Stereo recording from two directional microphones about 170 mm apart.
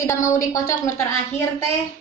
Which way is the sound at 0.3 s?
20° left (ahead or behind).